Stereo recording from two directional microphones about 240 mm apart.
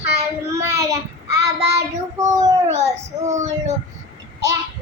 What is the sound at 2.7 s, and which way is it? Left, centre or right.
Speech, right.